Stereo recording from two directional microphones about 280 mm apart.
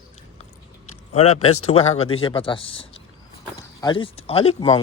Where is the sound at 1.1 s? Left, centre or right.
Left.